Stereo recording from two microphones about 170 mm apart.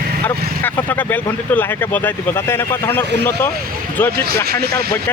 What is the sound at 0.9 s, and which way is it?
Speech, 10° left (ahead or behind).